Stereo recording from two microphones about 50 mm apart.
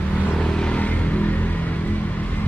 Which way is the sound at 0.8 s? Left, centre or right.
Left.